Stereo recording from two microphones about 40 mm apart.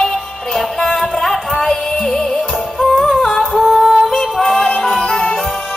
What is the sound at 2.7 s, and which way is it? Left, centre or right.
Music, centre.